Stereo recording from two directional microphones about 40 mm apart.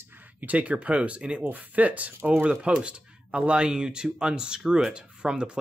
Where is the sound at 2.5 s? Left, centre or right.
Right.